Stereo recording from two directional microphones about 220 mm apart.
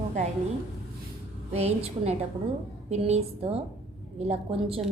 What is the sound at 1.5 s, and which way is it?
A woman's voice, 30° right (ahead or behind).